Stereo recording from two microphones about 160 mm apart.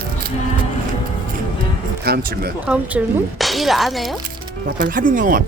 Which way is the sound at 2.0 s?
75° right (ahead or behind).